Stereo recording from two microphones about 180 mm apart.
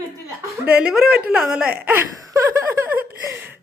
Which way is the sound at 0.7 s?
5° right (ahead or behind).